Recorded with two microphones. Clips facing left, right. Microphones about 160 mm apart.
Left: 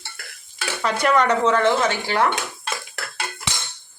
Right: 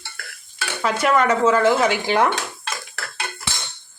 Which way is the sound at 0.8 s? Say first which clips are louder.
Right 1 dB; 5° right (ahead or behind).